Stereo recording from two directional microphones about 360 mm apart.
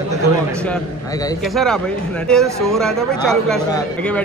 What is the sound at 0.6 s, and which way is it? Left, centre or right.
Speech, centre.